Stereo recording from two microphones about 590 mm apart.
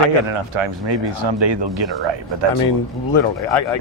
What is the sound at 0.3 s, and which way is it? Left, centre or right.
Speech, right.